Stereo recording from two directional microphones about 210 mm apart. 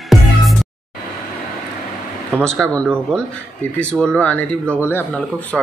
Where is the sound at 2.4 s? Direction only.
5° left (ahead or behind).